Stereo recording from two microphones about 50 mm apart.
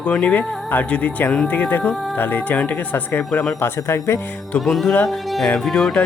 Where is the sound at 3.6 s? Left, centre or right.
Left.